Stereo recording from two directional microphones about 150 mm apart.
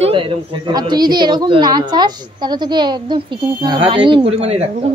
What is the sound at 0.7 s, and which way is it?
A woman's voice, 25° right (ahead or behind).